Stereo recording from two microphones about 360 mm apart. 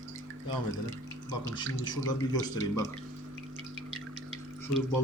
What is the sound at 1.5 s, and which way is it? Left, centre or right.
Speech, centre.